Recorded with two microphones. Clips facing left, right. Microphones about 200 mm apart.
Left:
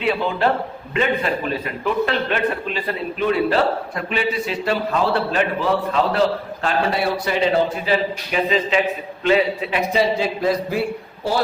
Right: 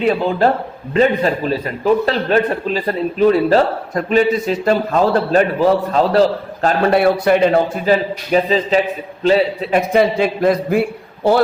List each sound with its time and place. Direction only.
0.0 s a man's voice: 40° right (ahead or behind)
6.9 s a man's voice: 55° right (ahead or behind)
8.3 s a man's voice: 35° right (ahead or behind)
9.9 s a man's voice: 55° right (ahead or behind)